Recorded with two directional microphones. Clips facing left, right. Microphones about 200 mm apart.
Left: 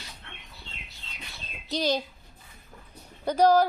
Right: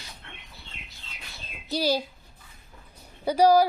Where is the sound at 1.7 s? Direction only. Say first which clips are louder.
Right 1 dB; 10° right (ahead or behind).